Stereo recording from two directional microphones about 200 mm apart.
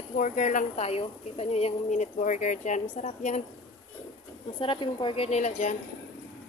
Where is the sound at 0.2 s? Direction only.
40° left (ahead or behind).